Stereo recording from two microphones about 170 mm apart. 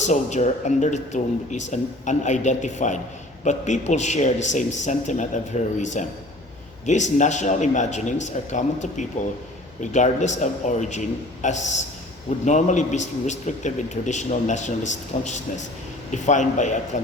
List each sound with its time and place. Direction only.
0.0 s a man's voice: 45° left (ahead or behind)